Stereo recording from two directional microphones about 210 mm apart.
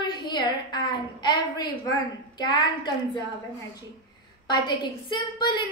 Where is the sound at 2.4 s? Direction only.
20° left (ahead or behind).